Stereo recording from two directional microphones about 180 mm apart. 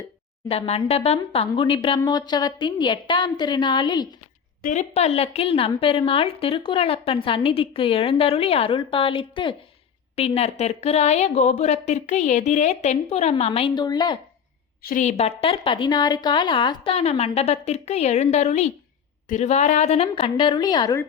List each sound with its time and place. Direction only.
0.4 s a woman's voice: 35° left (ahead or behind)
4.6 s a woman's voice: 40° left (ahead or behind); by 14.2 s 25° left (ahead or behind)
14.8 s a woman's voice: 50° left (ahead or behind); by 21.0 s 20° left (ahead or behind)